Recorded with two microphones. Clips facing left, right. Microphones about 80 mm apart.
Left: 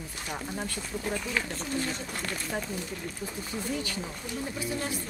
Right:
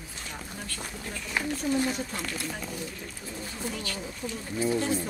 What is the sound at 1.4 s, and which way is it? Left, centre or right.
Speech, centre.